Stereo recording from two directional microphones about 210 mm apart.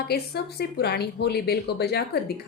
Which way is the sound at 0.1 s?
50° left (ahead or behind).